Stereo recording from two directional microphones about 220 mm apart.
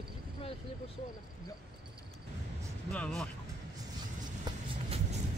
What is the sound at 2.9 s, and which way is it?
Speech, 5° left (ahead or behind).